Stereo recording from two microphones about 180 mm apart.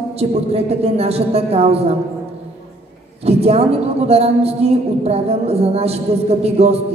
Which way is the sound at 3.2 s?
35° right (ahead or behind).